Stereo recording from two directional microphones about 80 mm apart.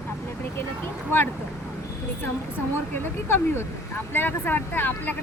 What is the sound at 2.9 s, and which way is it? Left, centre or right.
Speech, left.